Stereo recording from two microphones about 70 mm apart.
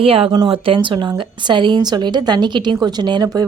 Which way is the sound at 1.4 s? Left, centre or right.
Right.